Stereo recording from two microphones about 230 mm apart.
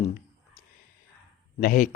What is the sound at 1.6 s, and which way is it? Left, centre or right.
Speech, left.